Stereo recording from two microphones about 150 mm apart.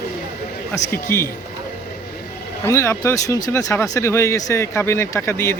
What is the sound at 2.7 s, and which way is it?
Speech, 20° left (ahead or behind).